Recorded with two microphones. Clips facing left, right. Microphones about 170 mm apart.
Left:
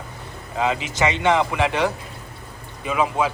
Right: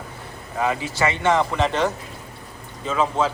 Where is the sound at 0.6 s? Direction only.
20° left (ahead or behind).